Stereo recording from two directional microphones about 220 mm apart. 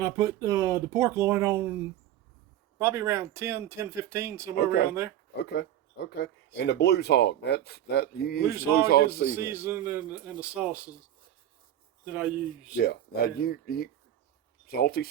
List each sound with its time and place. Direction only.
0.0 s speech: 15° right (ahead or behind)
2.7 s speech: 10° right (ahead or behind)
4.5 s speech: 45° left (ahead or behind)
8.4 s speech: 10° right (ahead or behind)
8.7 s speech: 45° left (ahead or behind)
9.3 s speech: 10° right (ahead or behind)
12.0 s speech: 5° right (ahead or behind)
12.7 s speech: 45° left (ahead or behind)